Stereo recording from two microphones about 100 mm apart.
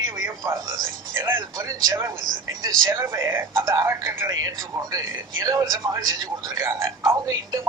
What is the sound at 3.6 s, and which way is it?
Speech, 45° right (ahead or behind).